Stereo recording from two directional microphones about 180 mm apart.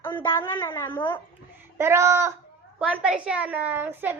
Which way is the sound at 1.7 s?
15° right (ahead or behind).